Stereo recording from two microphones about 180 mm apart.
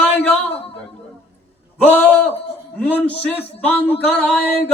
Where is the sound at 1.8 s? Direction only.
10° left (ahead or behind).